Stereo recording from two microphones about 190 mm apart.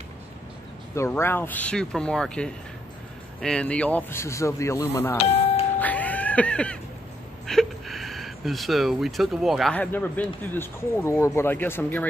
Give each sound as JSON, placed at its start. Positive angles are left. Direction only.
{"t": 0.9, "sound": "speech", "side_deg": 15}
{"t": 5.1, "sound": "music", "side_deg": 30}
{"t": 5.8, "sound": "music", "side_deg": 10}
{"t": 7.4, "sound": "speech", "side_deg": 0}